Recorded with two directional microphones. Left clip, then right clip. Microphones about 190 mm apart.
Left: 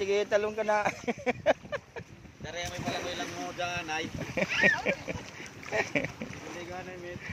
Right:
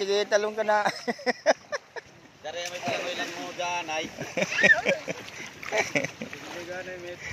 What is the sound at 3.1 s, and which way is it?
Speech, 80° left.